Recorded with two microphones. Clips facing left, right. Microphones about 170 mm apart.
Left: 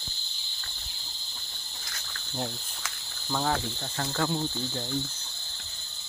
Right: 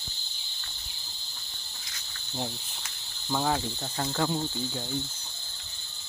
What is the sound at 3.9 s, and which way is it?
Ratchet, 20° right (ahead or behind).